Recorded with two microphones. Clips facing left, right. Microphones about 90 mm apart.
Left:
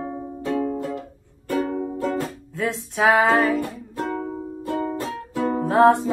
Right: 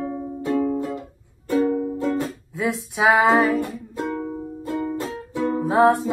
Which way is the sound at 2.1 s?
15° right (ahead or behind).